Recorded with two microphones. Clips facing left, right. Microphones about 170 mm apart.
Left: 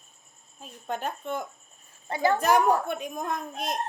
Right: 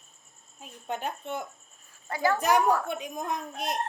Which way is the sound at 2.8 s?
55° left (ahead or behind).